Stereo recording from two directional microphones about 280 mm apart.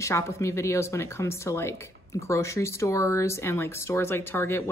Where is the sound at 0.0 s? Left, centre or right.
Centre.